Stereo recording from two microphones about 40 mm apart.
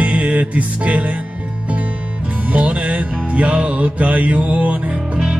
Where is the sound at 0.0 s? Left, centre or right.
Right.